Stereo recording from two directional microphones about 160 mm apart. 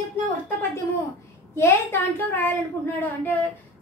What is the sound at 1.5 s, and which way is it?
A woman's voice, 15° left (ahead or behind).